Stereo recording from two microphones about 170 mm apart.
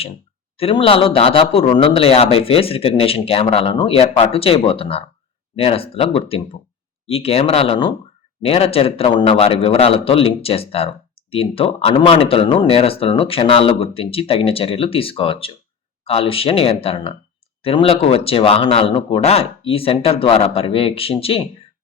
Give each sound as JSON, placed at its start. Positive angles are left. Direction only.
{"t": 0.5, "sound": "a man's voice", "side_deg": 35}